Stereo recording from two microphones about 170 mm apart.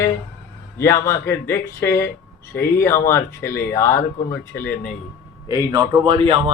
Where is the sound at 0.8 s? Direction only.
15° left (ahead or behind).